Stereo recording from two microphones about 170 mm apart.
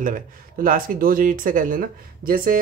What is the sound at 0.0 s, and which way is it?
Speech, 55° right (ahead or behind).